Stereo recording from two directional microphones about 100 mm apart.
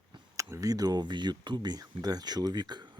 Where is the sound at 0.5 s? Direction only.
40° right (ahead or behind).